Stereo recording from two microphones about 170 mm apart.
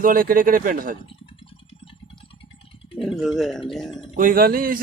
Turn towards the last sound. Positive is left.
turn(degrees=-60)  # may be behind; listen again after turning